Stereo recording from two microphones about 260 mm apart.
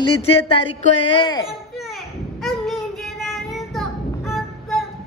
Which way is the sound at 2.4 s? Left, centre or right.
Centre.